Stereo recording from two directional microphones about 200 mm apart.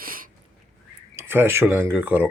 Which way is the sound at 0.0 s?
45° right (ahead or behind).